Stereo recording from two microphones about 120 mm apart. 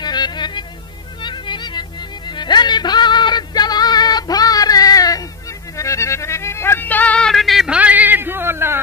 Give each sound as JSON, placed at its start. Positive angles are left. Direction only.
{"t": 0.0, "sound": "music", "side_deg": 35}